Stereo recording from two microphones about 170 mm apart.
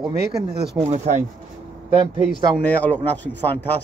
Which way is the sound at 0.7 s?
40° right (ahead or behind).